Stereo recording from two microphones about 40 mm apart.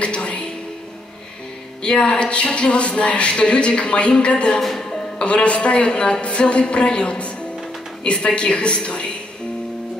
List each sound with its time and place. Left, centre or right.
0.0 s music: left
1.8 s speech: left
4.6 s music: centre
5.2 s speech: left